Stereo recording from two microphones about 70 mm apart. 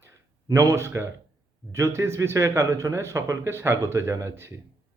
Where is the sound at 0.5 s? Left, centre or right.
Right.